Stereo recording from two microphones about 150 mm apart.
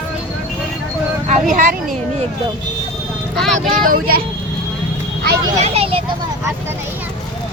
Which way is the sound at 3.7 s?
70° right (ahead or behind).